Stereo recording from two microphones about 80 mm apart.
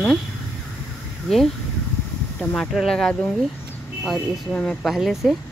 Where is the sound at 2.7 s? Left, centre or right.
Centre.